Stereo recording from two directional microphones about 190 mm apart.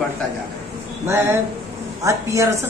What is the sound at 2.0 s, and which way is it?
Speech, 15° right (ahead or behind).